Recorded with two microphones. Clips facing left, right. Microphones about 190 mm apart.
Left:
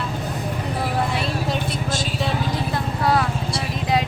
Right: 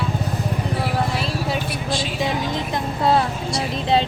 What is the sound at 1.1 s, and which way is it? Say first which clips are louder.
Vehicle: even; centre (ahead or behind).